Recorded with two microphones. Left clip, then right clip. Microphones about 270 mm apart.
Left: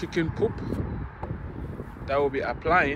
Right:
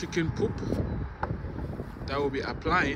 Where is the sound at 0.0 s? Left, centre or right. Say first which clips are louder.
Left 3 dB; centre.